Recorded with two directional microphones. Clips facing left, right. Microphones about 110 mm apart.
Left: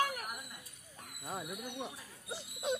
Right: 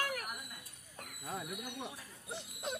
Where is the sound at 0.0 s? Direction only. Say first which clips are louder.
Left 4 dB; 20° left (ahead or behind).